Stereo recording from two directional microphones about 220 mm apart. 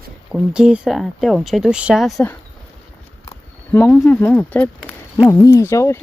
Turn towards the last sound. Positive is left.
turn(degrees=15)  # may be behind; listen again after turning